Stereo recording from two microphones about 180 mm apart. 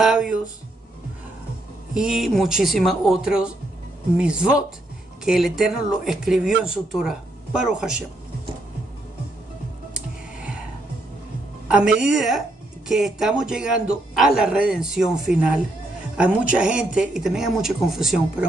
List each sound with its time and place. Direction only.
0.0 s a sound: centre (ahead or behind)
2.0 s speech: centre (ahead or behind)
9.9 s music: 5° right (ahead or behind)
11.6 s a woman's voice: 5° right (ahead or behind)